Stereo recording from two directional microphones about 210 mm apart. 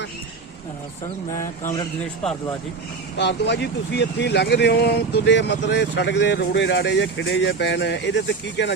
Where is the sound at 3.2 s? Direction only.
55° left (ahead or behind).